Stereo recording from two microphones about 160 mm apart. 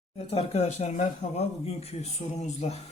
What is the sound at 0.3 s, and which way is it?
Speech, 40° left (ahead or behind).